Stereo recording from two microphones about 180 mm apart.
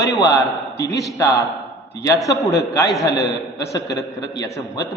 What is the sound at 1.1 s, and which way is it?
A man's voice, 20° left (ahead or behind).